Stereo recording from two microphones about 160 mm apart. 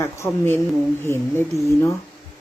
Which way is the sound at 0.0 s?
15° left (ahead or behind).